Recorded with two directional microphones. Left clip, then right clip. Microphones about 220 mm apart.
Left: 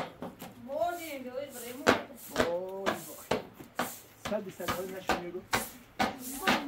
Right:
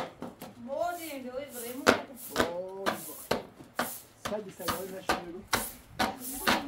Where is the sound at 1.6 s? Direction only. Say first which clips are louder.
Right 2 dB; 40° right (ahead or behind).